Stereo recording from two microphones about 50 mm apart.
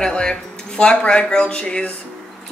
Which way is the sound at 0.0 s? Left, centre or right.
Centre.